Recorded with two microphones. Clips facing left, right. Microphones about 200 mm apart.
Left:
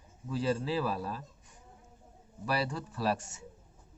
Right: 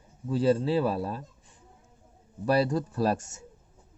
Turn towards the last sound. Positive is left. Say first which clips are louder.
# right 5 dB
turn(degrees=-45)  # may be behind; listen again after turning